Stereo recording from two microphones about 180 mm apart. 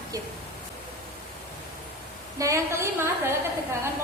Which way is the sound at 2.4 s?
15° right (ahead or behind).